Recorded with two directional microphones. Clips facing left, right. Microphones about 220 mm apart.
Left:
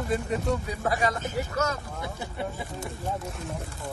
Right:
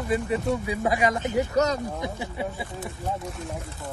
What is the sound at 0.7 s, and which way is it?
Speech, 15° right (ahead or behind).